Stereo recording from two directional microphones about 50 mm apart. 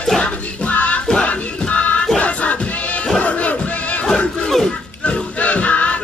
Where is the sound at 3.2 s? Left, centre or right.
Left.